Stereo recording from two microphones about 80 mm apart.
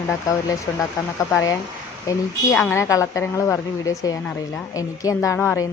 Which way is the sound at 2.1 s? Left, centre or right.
Left.